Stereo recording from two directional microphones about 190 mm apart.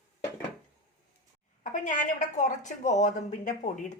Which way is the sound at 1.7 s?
40° left (ahead or behind).